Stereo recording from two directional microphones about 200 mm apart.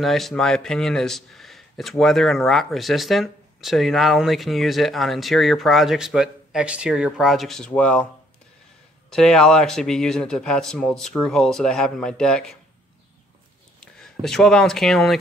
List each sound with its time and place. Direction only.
0.0 s speech: centre (ahead or behind)
9.1 s speech: 5° left (ahead or behind)
13.7 s speech: centre (ahead or behind)